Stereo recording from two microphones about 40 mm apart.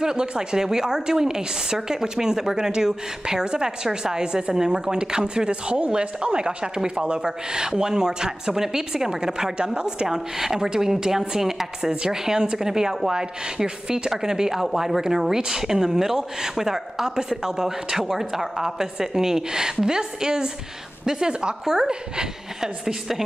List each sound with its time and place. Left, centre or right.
0.0 s a woman's voice: centre